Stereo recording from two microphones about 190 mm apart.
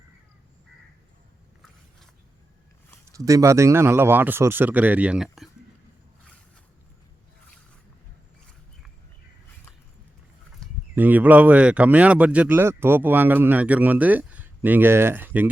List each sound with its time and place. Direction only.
3.2 s speech: 15° right (ahead or behind); by 5.5 s centre (ahead or behind)
10.6 s a sound: 5° left (ahead or behind)
10.9 s speech: 10° right (ahead or behind)